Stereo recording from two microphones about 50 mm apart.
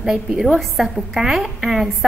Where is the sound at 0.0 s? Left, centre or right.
Centre.